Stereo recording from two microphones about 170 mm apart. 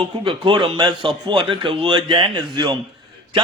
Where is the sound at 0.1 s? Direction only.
30° right (ahead or behind).